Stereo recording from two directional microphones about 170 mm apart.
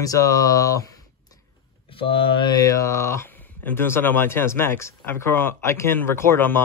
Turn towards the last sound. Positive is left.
turn(degrees=15)  # may be behind; listen again after turning